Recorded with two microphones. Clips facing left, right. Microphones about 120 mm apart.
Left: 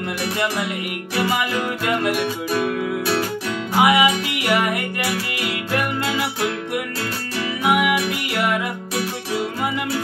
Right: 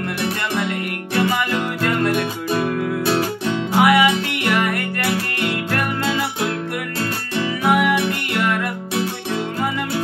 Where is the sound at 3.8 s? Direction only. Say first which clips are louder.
Right 1 dB; 15° left (ahead or behind).